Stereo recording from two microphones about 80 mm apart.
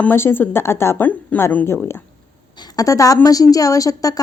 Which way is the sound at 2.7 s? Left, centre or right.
Left.